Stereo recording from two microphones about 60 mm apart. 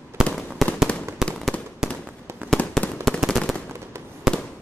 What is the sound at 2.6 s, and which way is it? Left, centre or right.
Fireworks, left.